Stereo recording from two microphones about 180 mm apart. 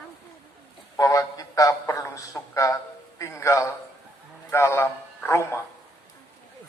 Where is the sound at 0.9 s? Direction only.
20° left (ahead or behind).